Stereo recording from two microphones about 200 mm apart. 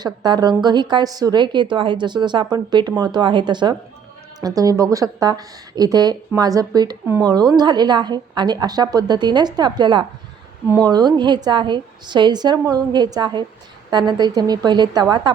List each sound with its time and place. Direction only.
0.0 s speech: 20° right (ahead or behind)